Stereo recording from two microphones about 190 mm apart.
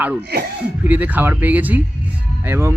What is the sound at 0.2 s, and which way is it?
Speech, 60° right (ahead or behind).